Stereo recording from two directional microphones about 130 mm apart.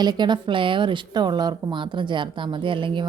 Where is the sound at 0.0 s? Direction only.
35° right (ahead or behind).